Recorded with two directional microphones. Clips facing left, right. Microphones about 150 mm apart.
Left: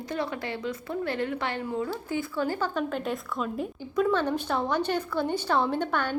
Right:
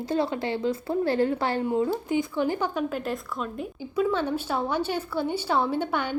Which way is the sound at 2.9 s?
Centre (ahead or behind).